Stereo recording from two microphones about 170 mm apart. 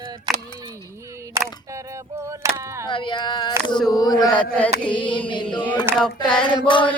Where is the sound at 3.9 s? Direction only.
20° left (ahead or behind).